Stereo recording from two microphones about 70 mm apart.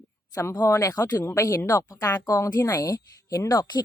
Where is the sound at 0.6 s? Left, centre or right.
Left.